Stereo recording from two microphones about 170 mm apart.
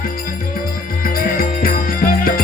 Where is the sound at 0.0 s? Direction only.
55° left (ahead or behind).